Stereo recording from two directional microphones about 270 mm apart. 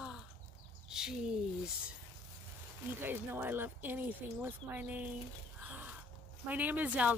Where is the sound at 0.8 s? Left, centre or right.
Centre.